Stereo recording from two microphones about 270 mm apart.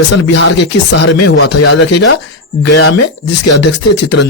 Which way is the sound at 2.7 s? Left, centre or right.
Left.